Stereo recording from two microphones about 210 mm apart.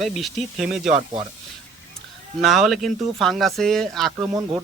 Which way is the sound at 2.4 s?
Centre (ahead or behind).